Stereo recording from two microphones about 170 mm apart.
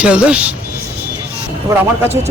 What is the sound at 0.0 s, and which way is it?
Speech, 5° right (ahead or behind).